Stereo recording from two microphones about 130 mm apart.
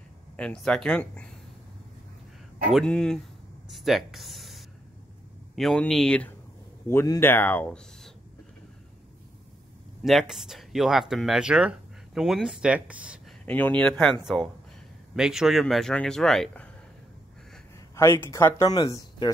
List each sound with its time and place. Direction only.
0.4 s speech: 5° left (ahead or behind)
2.7 s speech: 5° left (ahead or behind)
3.6 s a sound: centre (ahead or behind)
5.6 s speech: 5° left (ahead or behind)
6.9 s speech: 20° left (ahead or behind)
10.0 s speech: centre (ahead or behind)
13.5 s speech: 10° left (ahead or behind)
14.2 s speech: centre (ahead or behind)
17.7 s speech: 20° left (ahead or behind)